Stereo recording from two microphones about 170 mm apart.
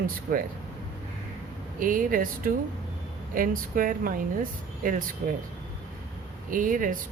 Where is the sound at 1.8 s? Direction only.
55° right (ahead or behind).